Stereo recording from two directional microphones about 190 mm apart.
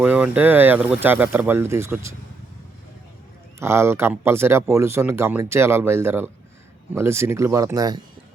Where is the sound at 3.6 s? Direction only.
15° right (ahead or behind).